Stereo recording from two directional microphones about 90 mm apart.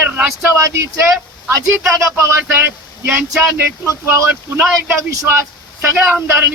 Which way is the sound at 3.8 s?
30° right (ahead or behind).